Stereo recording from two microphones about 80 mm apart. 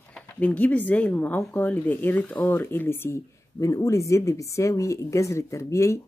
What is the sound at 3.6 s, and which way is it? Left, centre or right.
Speech, left.